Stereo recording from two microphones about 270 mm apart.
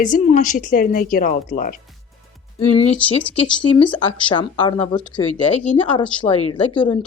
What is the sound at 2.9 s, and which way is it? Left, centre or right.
Speech, centre.